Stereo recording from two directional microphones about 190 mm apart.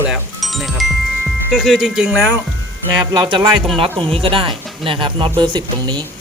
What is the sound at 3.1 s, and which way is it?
Speech, 20° right (ahead or behind).